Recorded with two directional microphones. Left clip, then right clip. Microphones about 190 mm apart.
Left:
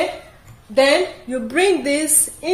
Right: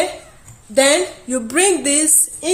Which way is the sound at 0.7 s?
50° right (ahead or behind).